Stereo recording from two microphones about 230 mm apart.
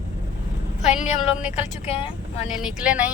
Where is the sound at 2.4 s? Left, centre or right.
Centre.